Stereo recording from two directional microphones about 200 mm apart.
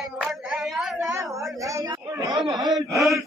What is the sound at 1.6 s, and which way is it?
Speech, 15° right (ahead or behind).